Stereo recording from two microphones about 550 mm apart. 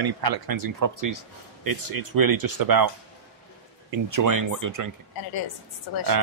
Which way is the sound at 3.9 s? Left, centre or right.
Right.